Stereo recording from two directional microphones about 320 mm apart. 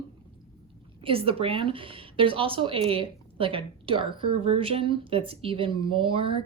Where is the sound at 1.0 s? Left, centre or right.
Centre.